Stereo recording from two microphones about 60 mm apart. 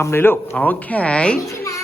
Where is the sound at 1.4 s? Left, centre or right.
Left.